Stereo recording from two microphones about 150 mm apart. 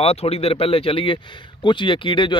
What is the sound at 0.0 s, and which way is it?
Speech, 45° left (ahead or behind).